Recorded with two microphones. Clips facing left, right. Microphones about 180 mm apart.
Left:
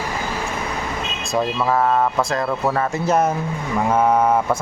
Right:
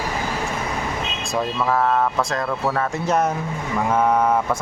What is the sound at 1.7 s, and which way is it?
Speech, 10° left (ahead or behind).